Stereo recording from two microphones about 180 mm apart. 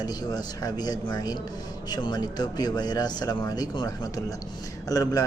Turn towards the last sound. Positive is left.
turn(degrees=20)  # may be behind; listen again after turning